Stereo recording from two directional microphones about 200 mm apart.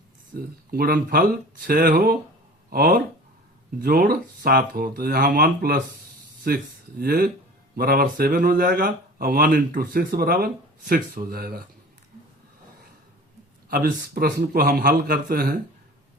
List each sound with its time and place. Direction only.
0.3 s speech: 50° right (ahead or behind)
13.7 s speech: 45° right (ahead or behind)